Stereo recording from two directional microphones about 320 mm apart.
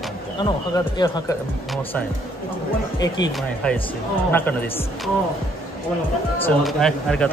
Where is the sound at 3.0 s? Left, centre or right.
Centre.